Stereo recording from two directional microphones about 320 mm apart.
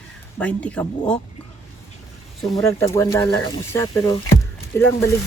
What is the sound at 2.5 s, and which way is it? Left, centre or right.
Speech, centre.